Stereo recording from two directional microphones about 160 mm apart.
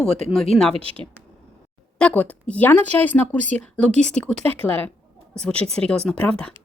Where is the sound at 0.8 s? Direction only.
35° right (ahead or behind).